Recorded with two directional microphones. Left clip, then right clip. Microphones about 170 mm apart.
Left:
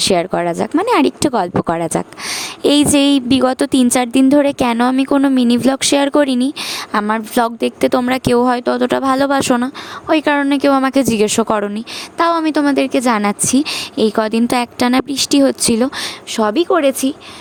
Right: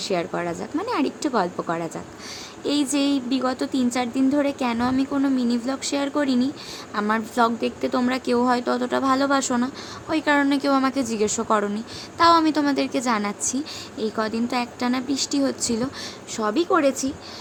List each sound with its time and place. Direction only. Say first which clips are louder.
0.0 s speech: left 10 dB; 65° left (ahead or behind)
6.9 s speech: left 7 dB; 55° left (ahead or behind)